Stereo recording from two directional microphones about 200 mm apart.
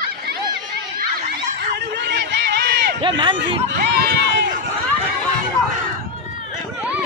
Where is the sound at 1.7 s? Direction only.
60° right (ahead or behind).